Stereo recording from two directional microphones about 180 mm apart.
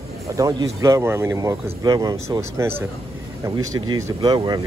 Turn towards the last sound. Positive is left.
turn(degrees=-25)  # may be behind; listen again after turning